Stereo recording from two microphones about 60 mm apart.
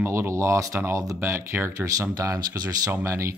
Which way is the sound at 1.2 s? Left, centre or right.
Right.